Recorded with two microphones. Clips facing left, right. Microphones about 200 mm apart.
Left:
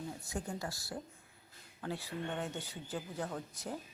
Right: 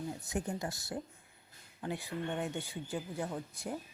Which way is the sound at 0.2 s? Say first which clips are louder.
Right 3 dB; 20° right (ahead or behind).